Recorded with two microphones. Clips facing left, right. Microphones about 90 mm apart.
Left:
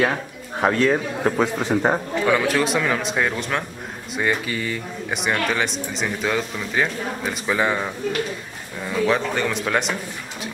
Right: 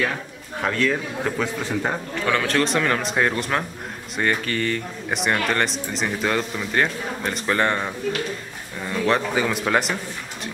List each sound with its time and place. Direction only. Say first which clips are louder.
0.6 s a man's voice: left 4 dB; 30° left (ahead or behind)
2.2 s speech: left 1 dB; 10° left (ahead or behind)
4.2 s speech: even; 10° left (ahead or behind)